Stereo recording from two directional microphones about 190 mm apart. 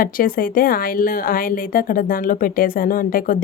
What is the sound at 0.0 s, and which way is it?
A woman's voice, 50° left (ahead or behind).